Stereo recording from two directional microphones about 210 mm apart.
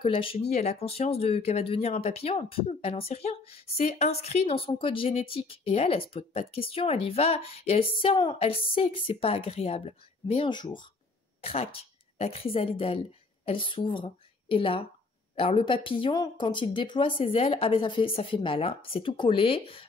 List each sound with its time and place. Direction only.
0.0 s a woman's voice: 25° left (ahead or behind)